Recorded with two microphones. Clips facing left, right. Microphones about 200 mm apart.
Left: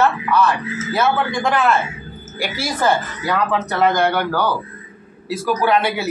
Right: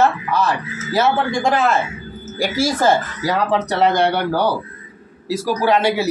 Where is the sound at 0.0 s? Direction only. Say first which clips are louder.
Left 1 dB; 40° right (ahead or behind).